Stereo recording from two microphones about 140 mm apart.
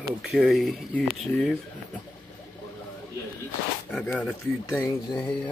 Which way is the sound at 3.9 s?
10° left (ahead or behind).